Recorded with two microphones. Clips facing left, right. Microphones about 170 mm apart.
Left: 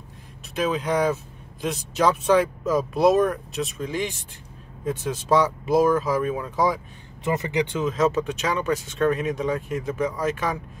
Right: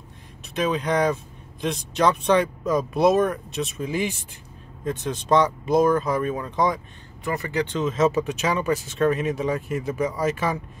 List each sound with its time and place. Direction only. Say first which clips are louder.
0.6 s speech: right 1 dB; centre (ahead or behind)
4.8 s speech: even; 5° left (ahead or behind)
7.2 s speech: left 2 dB; 20° left (ahead or behind)
7.8 s speech: right 3 dB; centre (ahead or behind)